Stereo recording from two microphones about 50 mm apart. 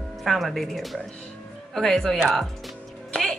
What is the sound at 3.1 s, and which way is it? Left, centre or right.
Music, centre.